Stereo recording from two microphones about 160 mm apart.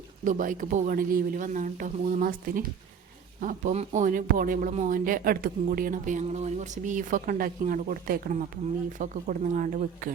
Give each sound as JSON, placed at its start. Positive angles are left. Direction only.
{"t": 0.3, "sound": "speech", "side_deg": -55}
{"t": 3.4, "sound": "speech", "side_deg": -50}